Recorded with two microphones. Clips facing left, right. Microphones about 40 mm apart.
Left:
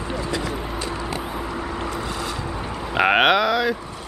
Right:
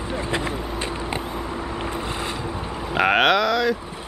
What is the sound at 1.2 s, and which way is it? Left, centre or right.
Vehicle, centre.